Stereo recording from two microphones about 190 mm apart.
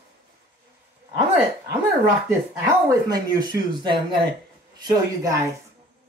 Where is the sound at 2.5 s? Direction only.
20° right (ahead or behind).